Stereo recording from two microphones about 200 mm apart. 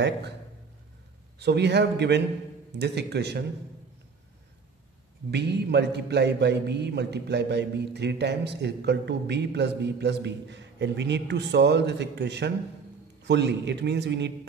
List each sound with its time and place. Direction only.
1.4 s a man's voice: 55° right (ahead or behind)
5.3 s a man's voice: 55° right (ahead or behind)